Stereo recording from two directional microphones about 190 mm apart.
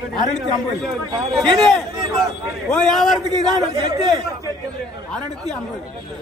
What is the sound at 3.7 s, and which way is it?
Speech, 20° right (ahead or behind).